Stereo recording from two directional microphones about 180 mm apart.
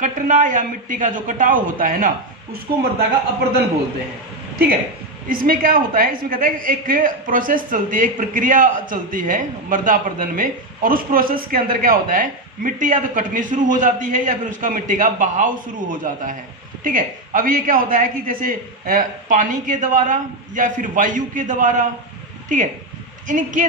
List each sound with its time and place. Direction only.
0.0 s a woman's voice: 45° right (ahead or behind)
5.3 s a woman's voice: 50° right (ahead or behind)